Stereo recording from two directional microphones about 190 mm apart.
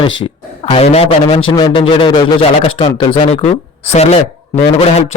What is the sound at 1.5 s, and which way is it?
A man's voice, 20° left (ahead or behind).